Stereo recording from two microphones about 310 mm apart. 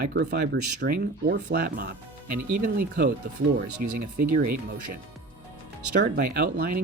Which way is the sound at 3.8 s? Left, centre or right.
Right.